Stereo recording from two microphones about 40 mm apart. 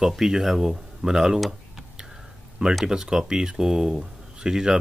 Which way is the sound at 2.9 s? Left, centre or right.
Centre.